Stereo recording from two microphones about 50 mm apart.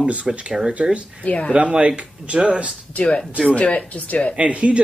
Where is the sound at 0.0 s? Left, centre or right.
Right.